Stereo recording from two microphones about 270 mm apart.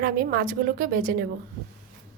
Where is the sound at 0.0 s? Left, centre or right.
Right.